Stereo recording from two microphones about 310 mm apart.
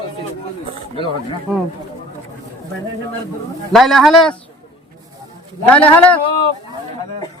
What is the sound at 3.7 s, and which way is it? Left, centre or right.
Speech, centre.